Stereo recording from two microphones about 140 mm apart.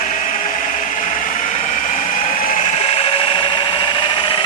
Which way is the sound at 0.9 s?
70° left (ahead or behind).